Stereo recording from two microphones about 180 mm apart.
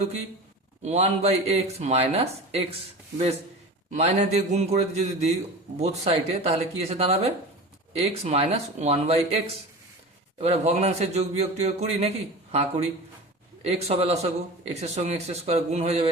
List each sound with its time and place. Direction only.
0.8 s a man's voice: 40° right (ahead or behind)
3.9 s a man's voice: 35° right (ahead or behind)
10.4 s a man's voice: 35° right (ahead or behind)